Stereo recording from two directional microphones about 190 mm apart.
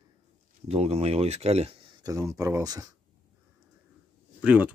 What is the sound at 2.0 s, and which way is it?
Speech, 15° right (ahead or behind).